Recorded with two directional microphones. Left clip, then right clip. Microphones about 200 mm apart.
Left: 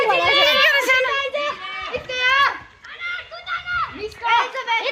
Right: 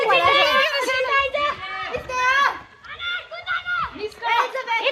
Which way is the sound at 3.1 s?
15° right (ahead or behind).